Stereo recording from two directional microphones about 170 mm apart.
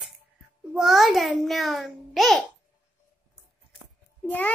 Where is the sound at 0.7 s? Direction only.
Centre (ahead or behind).